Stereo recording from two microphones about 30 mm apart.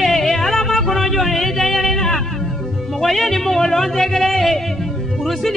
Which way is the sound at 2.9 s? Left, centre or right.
Centre.